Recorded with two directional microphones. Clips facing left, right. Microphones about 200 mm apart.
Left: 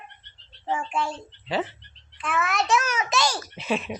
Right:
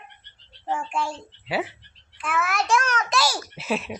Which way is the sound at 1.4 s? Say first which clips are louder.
Even; 10° right (ahead or behind).